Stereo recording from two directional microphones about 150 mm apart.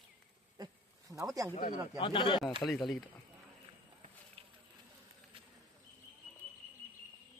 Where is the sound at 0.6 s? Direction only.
25° right (ahead or behind).